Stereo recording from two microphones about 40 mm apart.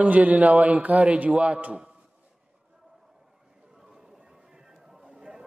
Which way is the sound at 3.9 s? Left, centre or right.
Centre.